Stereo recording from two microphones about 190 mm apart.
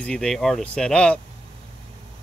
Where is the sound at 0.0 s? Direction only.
5° left (ahead or behind).